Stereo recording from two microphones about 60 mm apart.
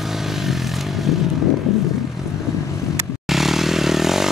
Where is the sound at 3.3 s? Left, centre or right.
Centre.